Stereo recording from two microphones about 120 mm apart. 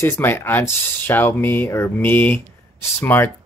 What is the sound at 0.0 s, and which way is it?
Speech, 20° left (ahead or behind).